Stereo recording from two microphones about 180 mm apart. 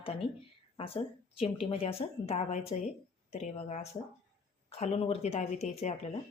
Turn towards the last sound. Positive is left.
turn(degrees=40)  # may be behind; listen again after turning